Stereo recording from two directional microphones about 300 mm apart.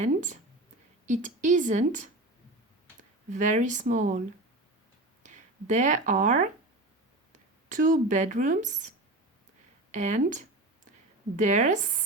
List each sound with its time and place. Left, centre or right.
0.0 s a woman's voice: right
5.2 s a woman's voice: right